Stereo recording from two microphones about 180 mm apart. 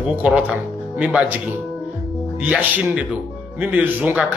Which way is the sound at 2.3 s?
5° right (ahead or behind).